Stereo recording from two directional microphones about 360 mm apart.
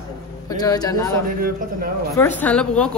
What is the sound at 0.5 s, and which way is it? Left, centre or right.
A man's voice, centre.